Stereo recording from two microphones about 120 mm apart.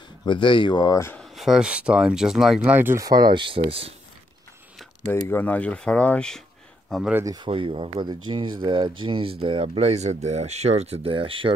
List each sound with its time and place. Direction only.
0.2 s speech: 40° left (ahead or behind)
1.1 s speech: centre (ahead or behind)
2.6 s speech: 15° right (ahead or behind)
3.0 s speech: 30° right (ahead or behind); by 3.9 s 50° right (ahead or behind)
5.1 s speech: 15° left (ahead or behind)
7.4 s speech: 45° right (ahead or behind)